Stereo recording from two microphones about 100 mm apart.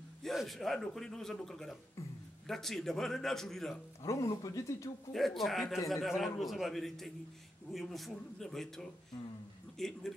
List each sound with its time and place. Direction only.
0.2 s a man's voice: centre (ahead or behind)
4.0 s speech: 35° left (ahead or behind)
5.1 s a man's voice: centre (ahead or behind)